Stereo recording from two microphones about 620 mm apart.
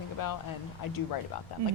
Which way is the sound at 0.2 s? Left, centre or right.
Left.